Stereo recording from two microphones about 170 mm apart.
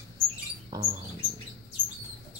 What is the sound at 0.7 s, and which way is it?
Rodents, 25° right (ahead or behind).